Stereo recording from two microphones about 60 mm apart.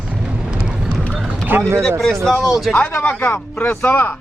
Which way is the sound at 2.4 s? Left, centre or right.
Centre.